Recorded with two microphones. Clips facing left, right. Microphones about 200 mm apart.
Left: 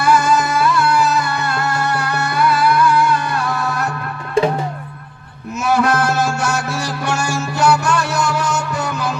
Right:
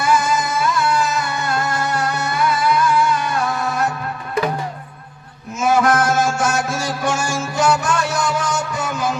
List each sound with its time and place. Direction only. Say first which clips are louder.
0.0 s music: left 3 dB; 65° left (ahead or behind)
4.4 s drum: left 5 dB; 30° left (ahead or behind)
5.6 s music: even; 65° left (ahead or behind)